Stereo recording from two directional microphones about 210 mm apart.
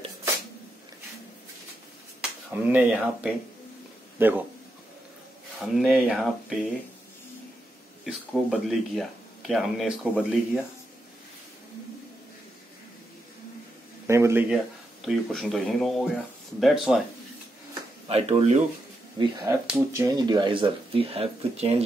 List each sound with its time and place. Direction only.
2.5 s speech: 10° right (ahead or behind)
5.6 s speech: centre (ahead or behind)
8.0 s speech: centre (ahead or behind)
14.0 s speech: 15° right (ahead or behind)
18.0 s speech: 30° right (ahead or behind)
19.1 s speech: 15° right (ahead or behind)